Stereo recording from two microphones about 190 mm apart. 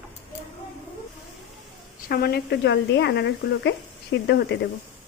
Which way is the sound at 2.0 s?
55° left (ahead or behind).